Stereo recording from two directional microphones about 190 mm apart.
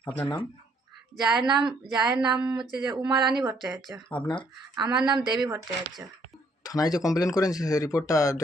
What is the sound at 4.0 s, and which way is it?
Speech, 5° left (ahead or behind).